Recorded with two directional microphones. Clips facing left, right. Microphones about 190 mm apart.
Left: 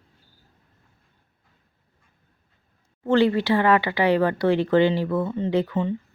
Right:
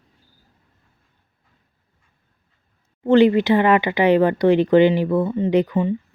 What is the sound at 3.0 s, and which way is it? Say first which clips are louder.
Speech: right 5 dB; 20° right (ahead or behind).